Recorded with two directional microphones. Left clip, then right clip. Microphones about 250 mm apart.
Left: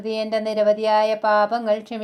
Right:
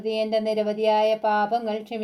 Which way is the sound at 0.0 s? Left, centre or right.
Centre.